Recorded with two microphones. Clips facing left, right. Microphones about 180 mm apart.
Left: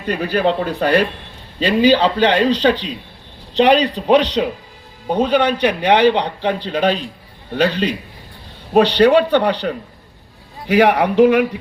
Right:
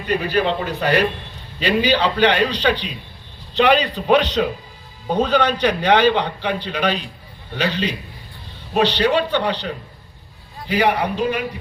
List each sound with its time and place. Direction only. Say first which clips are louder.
0.2 s a man's voice: left 3 dB; 40° left (ahead or behind)
5.0 s a man's voice: left 2 dB; 20° left (ahead or behind)
7.5 s a man's voice: left 5 dB; 45° left (ahead or behind)
8.8 s a man's voice: left 6 dB; 55° left (ahead or behind)
10.7 s a man's voice: left 5 dB; 80° left